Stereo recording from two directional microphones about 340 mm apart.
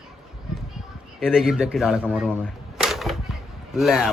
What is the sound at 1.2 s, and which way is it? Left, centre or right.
Speech, centre.